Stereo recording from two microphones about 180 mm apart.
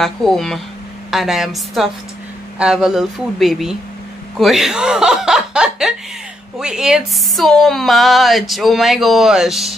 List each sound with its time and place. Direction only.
0.0 s speech: centre (ahead or behind)